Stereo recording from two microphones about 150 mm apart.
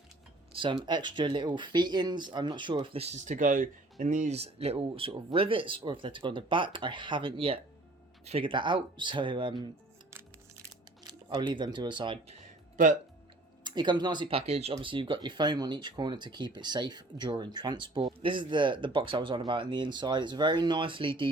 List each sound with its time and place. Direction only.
0.5 s speech: 35° right (ahead or behind)
11.0 s speech: 30° right (ahead or behind)
12.7 s speech: 60° right (ahead or behind)
13.7 s speech: 30° right (ahead or behind)